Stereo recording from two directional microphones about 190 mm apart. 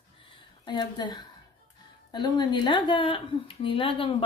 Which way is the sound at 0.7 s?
25° left (ahead or behind).